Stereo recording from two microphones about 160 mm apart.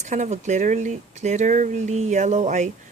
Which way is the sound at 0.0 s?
45° right (ahead or behind).